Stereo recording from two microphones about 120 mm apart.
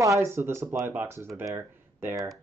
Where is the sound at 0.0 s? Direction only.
25° right (ahead or behind).